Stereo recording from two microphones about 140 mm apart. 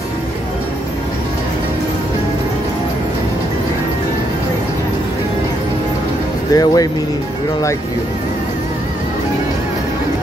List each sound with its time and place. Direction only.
6.5 s speech: 25° left (ahead or behind)